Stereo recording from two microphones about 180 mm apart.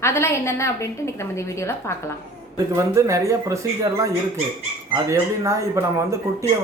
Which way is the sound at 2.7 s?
15° right (ahead or behind).